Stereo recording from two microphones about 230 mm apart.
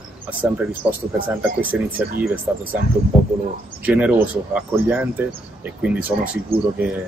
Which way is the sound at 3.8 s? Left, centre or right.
Centre.